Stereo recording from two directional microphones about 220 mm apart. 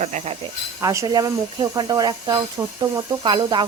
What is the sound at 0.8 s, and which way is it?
Speech, 15° right (ahead or behind).